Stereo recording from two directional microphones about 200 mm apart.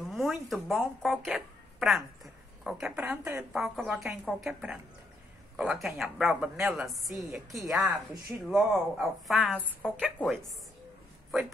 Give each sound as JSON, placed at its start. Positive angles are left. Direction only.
{"t": 0.0, "sound": "a woman's voice", "side_deg": 0}
{"t": 3.6, "sound": "a woman's voice", "side_deg": 0}